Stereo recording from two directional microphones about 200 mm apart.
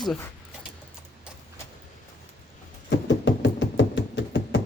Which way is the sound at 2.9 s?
60° left (ahead or behind).